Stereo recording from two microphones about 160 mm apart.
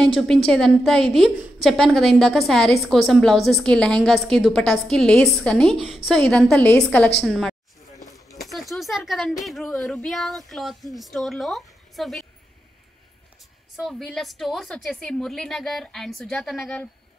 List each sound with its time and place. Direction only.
0.0 s a woman's voice: centre (ahead or behind)
8.0 s a sound: 20° left (ahead or behind)
8.4 s a woman's voice: centre (ahead or behind)
13.7 s a woman's voice: centre (ahead or behind)